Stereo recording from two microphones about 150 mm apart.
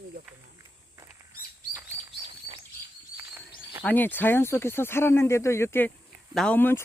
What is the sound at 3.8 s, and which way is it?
Speech, 10° left (ahead or behind).